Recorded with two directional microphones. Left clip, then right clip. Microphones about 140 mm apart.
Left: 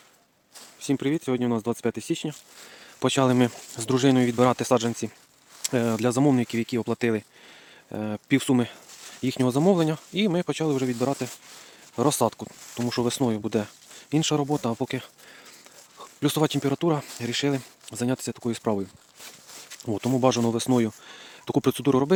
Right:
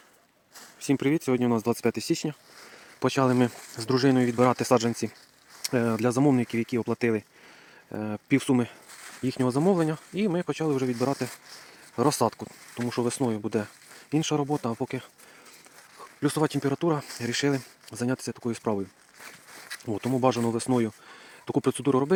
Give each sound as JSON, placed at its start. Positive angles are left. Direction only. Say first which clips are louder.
{"t": 0.8, "sound": "speech", "louder": "right 1 dB", "side_deg": -5}
{"t": 3.0, "sound": "speech", "louder": "left 2 dB", "side_deg": 25}
{"t": 4.5, "sound": "speech", "louder": "even", "side_deg": 5}
{"t": 5.6, "sound": "speech", "louder": "left 1 dB", "side_deg": 20}
{"t": 12.9, "sound": "speech", "louder": "left 2 dB", "side_deg": 35}
{"t": 17.2, "sound": "speech", "louder": "even", "side_deg": 15}
{"t": 17.6, "sound": "speech", "louder": "left 2 dB", "side_deg": 25}
{"t": 19.8, "sound": "speech", "louder": "left 2 dB", "side_deg": 40}